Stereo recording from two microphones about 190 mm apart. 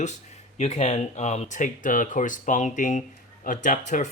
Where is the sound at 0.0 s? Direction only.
40° left (ahead or behind).